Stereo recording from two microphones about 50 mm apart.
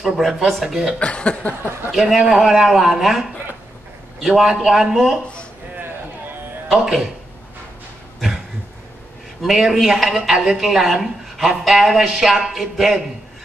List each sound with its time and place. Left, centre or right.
0.0 s speech: centre
0.9 s speech: left
1.9 s a man's voice: centre
6.7 s speech: centre
9.4 s speech: centre